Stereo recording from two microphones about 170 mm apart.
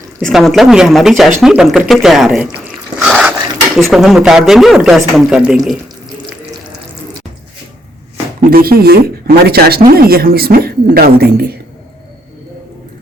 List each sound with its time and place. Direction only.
0.2 s speech: centre (ahead or behind)
3.0 s a sound: 5° right (ahead or behind)
3.8 s speech: centre (ahead or behind)
8.4 s speech: 60° right (ahead or behind)